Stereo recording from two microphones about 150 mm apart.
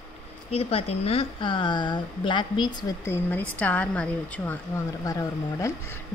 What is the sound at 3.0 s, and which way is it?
A woman's voice, 15° left (ahead or behind).